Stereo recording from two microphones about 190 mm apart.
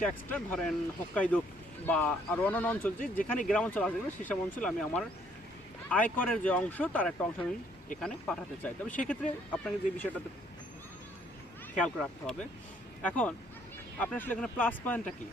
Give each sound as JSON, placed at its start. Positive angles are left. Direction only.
{"t": 0.3, "sound": "speech", "side_deg": 5}
{"t": 3.0, "sound": "speech", "side_deg": 45}
{"t": 3.5, "sound": "speech", "side_deg": 5}
{"t": 11.8, "sound": "speech", "side_deg": 5}